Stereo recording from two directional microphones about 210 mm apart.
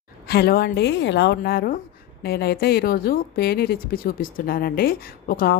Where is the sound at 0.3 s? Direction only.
50° left (ahead or behind).